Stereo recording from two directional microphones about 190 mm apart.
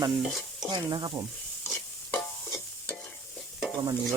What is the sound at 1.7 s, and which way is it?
Stir, 5° left (ahead or behind).